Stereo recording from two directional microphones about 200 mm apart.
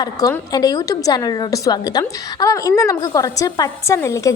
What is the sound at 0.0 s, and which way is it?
A woman's voice, 20° left (ahead or behind).